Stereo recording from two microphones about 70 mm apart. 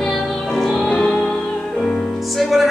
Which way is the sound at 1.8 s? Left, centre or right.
Centre.